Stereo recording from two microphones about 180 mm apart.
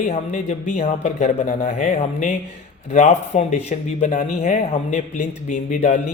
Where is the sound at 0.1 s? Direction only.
40° left (ahead or behind).